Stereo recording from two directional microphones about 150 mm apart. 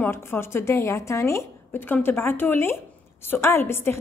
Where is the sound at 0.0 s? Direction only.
15° left (ahead or behind).